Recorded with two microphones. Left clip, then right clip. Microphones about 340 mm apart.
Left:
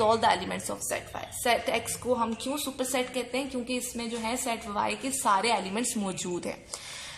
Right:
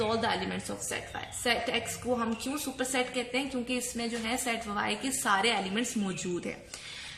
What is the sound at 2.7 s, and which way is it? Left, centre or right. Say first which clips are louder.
A woman's voice: right 1 dB; centre.